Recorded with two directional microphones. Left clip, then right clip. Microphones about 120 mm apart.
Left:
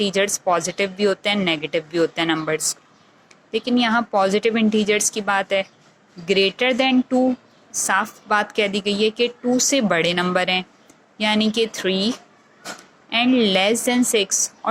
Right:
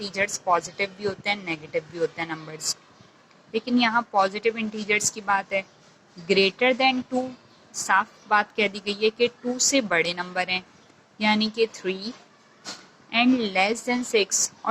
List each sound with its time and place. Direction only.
0.0 s a woman's voice: 35° left (ahead or behind)